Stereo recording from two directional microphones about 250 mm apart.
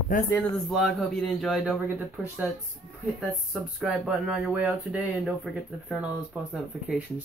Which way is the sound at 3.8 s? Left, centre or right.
Centre.